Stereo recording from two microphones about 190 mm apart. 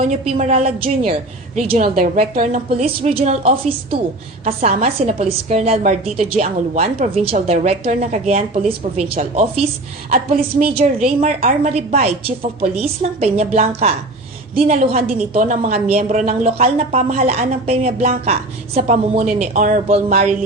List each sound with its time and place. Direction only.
0.1 s a woman's voice: 35° right (ahead or behind)
1.8 s a woman's voice: 45° right (ahead or behind)
10.8 s a woman's voice: 40° right (ahead or behind)